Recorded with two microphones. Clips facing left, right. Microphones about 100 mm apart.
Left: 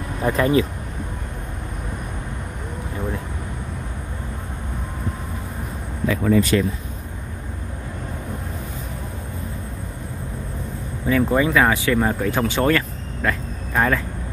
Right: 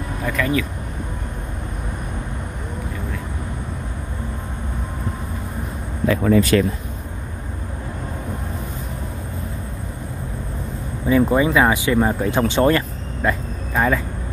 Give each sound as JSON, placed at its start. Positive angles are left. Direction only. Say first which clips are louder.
{"t": 0.2, "sound": "speech", "louder": "left 4 dB", "side_deg": 30}
{"t": 6.0, "sound": "speech", "louder": "right 2 dB", "side_deg": -55}
{"t": 11.1, "sound": "speech", "louder": "right 2 dB", "side_deg": -20}
{"t": 13.7, "sound": "speech", "louder": "right 1 dB", "side_deg": -5}